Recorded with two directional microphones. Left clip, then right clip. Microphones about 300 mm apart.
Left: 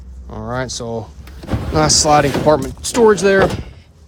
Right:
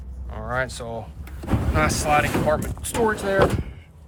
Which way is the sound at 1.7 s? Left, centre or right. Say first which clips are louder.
Left 8 dB; centre.